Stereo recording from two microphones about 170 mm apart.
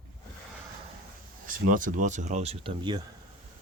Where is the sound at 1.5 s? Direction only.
50° right (ahead or behind).